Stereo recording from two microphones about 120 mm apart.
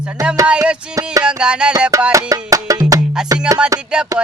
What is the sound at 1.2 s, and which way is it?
Music, 10° right (ahead or behind).